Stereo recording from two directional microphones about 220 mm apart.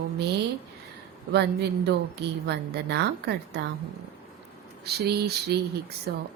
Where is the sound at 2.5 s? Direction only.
50° right (ahead or behind).